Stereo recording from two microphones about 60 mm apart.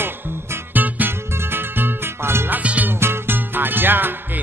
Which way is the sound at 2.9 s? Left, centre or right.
Right.